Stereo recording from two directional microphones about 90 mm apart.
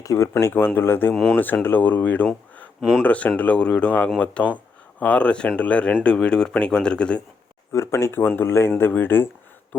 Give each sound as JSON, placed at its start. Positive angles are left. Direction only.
{"t": 0.0, "sound": "speech", "side_deg": 35}
{"t": 1.1, "sound": "speech", "side_deg": 0}
{"t": 1.6, "sound": "speech", "side_deg": 20}
{"t": 7.7, "sound": "speech", "side_deg": 30}